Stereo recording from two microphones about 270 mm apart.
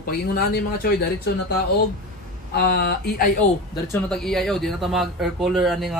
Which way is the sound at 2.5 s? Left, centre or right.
Left.